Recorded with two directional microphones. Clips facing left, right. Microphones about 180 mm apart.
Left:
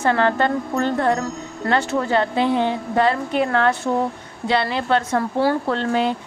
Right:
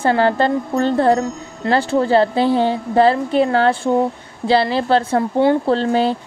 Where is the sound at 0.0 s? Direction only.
30° right (ahead or behind).